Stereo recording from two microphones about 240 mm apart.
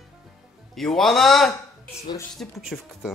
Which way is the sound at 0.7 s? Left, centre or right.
Centre.